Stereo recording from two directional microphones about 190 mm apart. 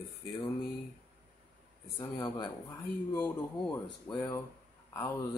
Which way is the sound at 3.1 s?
10° left (ahead or behind).